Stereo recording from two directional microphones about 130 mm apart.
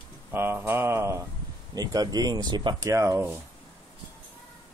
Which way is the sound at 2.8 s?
25° right (ahead or behind).